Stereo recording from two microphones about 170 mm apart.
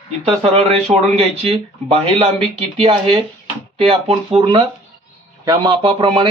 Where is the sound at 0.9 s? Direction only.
35° right (ahead or behind).